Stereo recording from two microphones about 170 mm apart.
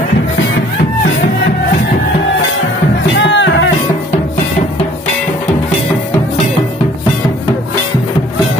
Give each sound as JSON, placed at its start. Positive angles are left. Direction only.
{"t": 3.2, "sound": "music", "side_deg": 90}